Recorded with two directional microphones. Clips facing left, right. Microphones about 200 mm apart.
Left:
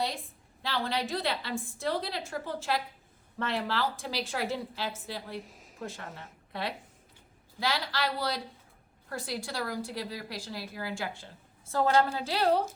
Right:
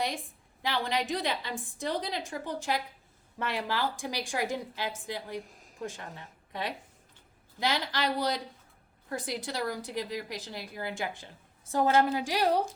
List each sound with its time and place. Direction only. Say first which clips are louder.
0.6 s a woman's voice: right 1 dB; 15° right (ahead or behind)
5.4 s a sound: right 1 dB; centre (ahead or behind)
5.8 s a woman's voice: right 1 dB; 15° right (ahead or behind)